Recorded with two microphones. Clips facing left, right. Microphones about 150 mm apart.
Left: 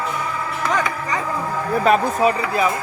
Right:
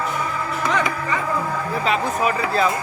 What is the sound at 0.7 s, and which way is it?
Music, 45° left (ahead or behind).